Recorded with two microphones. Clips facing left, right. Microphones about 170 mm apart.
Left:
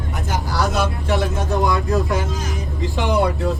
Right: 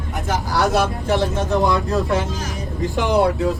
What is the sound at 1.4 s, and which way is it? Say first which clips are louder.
Speech: right 1 dB; 20° right (ahead or behind).